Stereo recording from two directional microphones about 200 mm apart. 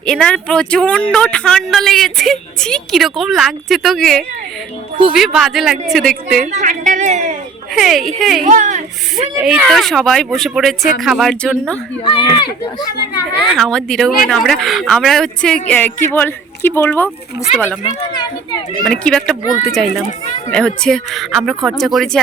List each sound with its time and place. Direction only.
0.0 s speech: 5° left (ahead or behind)
6.4 s a sound: 35° right (ahead or behind)
7.8 s speech: centre (ahead or behind)
8.4 s speech: 40° right (ahead or behind)
9.3 s speech: 5° right (ahead or behind)
12.0 s speech: 25° left (ahead or behind)
13.4 s speech: centre (ahead or behind)
18.9 s speech: 5° left (ahead or behind)